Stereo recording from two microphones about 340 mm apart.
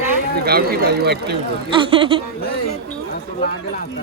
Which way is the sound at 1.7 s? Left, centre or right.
Centre.